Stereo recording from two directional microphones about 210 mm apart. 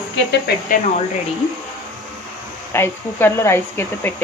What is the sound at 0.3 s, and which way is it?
Speech, 50° left (ahead or behind).